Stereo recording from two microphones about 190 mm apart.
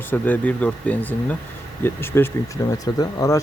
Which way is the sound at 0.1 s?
10° left (ahead or behind).